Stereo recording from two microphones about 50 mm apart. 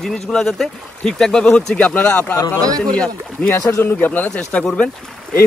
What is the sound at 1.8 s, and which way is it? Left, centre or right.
Speech, left.